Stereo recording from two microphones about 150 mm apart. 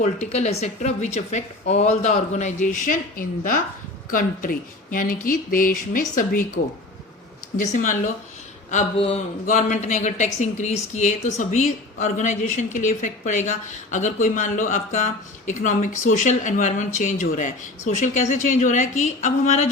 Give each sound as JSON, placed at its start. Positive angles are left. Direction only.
{"t": 0.0, "sound": "speech", "side_deg": 50}
{"t": 7.5, "sound": "a woman's voice", "side_deg": 60}
{"t": 8.7, "sound": "speech", "side_deg": 45}
{"t": 9.5, "sound": "a woman's voice", "side_deg": 55}